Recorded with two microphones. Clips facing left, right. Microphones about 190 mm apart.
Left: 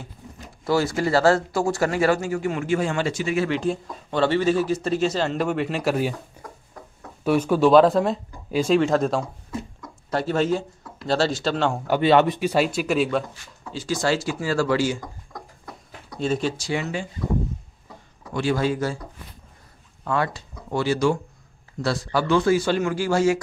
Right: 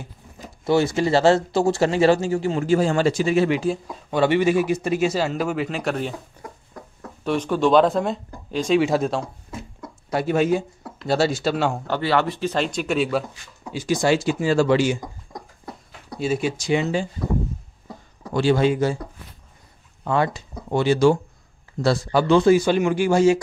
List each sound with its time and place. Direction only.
0.7 s speech: 20° right (ahead or behind)
3.4 s speech: 5° right (ahead or behind)
7.2 s speech: 10° left (ahead or behind)
8.7 s speech: 5° right (ahead or behind)
11.9 s speech: 20° left (ahead or behind); by 13.2 s centre (ahead or behind)
13.7 s speech: 15° right (ahead or behind)
16.2 s speech: 10° right (ahead or behind); by 17.0 s 25° right (ahead or behind)
18.2 s a man's voice: 30° right (ahead or behind)
20.1 s speech: 20° right (ahead or behind)